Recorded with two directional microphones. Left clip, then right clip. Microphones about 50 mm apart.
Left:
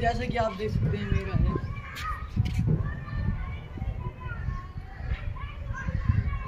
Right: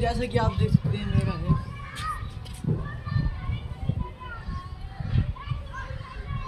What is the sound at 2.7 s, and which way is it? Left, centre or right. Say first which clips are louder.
Children playing: right 2 dB; left.